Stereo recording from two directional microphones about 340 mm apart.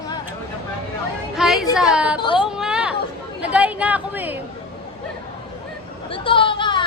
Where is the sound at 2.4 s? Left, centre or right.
Centre.